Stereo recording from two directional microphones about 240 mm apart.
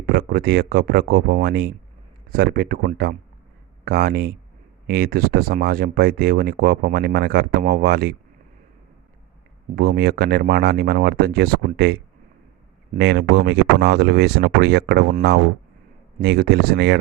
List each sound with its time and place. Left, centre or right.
0.0 s speech: right
9.7 s speech: right